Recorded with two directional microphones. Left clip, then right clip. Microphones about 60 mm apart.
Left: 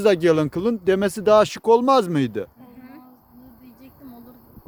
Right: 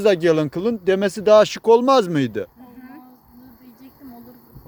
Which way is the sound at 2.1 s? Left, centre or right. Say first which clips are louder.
Right 1 dB; left.